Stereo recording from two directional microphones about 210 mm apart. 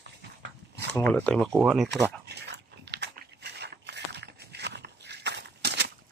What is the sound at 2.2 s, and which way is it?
Dog, 55° right (ahead or behind).